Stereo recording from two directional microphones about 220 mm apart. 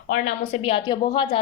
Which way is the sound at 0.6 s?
20° left (ahead or behind).